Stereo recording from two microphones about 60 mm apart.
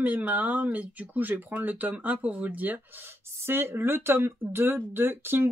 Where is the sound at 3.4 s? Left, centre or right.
Right.